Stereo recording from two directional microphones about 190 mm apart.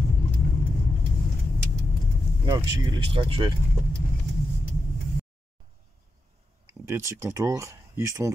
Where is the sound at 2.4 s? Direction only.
20° right (ahead or behind).